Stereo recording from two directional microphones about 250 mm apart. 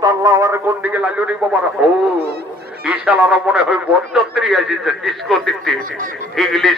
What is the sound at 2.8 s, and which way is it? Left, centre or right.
A man's voice, centre.